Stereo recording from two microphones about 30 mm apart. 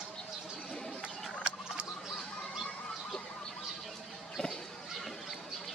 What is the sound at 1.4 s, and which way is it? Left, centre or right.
Rodents, right.